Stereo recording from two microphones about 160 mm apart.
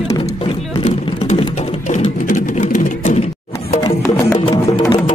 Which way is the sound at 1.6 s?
45° left (ahead or behind).